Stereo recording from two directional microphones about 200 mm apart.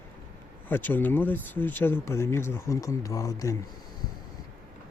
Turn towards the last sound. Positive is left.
turn(degrees=15)  # may be behind; listen again after turning